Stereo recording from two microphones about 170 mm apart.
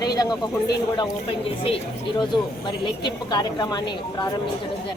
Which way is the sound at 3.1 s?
25° left (ahead or behind).